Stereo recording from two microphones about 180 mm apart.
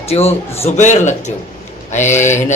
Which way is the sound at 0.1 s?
35° left (ahead or behind).